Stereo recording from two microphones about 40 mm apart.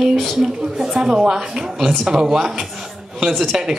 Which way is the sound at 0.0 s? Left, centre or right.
Centre.